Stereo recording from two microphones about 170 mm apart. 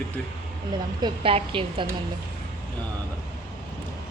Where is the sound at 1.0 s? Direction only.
35° right (ahead or behind).